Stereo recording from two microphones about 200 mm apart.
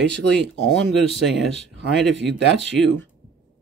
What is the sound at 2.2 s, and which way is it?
Speech, 60° right (ahead or behind).